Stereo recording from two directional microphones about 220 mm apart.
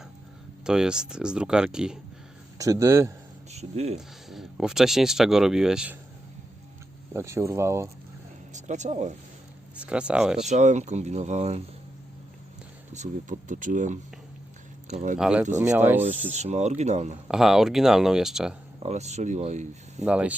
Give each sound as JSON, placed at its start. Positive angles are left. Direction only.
{"t": 0.6, "sound": "speech", "side_deg": -5}
{"t": 2.6, "sound": "speech", "side_deg": -15}
{"t": 3.5, "sound": "speech", "side_deg": -30}
{"t": 3.9, "sound": "speech", "side_deg": 0}
{"t": 7.1, "sound": "speech", "side_deg": -10}
{"t": 8.5, "sound": "speech", "side_deg": -35}
{"t": 9.7, "sound": "speech", "side_deg": -5}
{"t": 10.5, "sound": "speech", "side_deg": -35}
{"t": 12.9, "sound": "speech", "side_deg": -35}
{"t": 15.2, "sound": "speech", "side_deg": -5}
{"t": 16.3, "sound": "speech", "side_deg": -30}
{"t": 17.2, "sound": "speech", "side_deg": 0}
{"t": 18.8, "sound": "speech", "side_deg": -30}
{"t": 20.1, "sound": "speech", "side_deg": -5}